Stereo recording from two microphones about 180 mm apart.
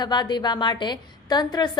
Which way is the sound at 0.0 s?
25° left (ahead or behind).